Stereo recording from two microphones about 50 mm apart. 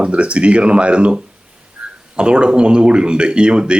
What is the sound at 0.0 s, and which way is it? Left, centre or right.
Speech, right.